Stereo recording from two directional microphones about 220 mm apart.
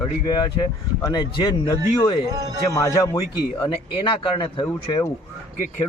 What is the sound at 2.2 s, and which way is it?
Speech, 15° right (ahead or behind).